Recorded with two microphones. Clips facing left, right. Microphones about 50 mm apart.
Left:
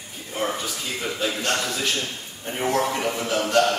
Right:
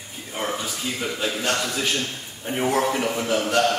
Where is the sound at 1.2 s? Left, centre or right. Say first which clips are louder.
Even; centre.